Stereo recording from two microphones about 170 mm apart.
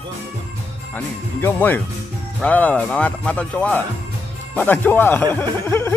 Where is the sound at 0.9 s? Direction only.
10° left (ahead or behind).